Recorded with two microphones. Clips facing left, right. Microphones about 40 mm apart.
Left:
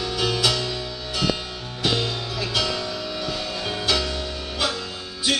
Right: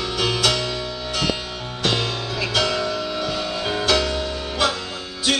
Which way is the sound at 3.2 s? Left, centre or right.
Centre.